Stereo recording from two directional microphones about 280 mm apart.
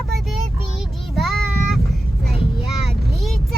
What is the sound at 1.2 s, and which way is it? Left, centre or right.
Child singing, centre.